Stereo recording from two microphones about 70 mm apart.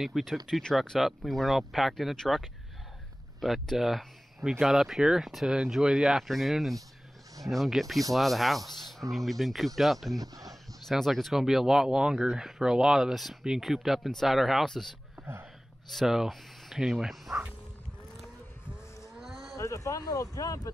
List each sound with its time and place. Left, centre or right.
0.0 s speech: centre
0.5 s speech: centre
1.0 s speech: centre
10.1 s speech: right
10.9 s speech: centre
15.9 s speech: centre
18.7 s livestock: centre
19.5 s speech: left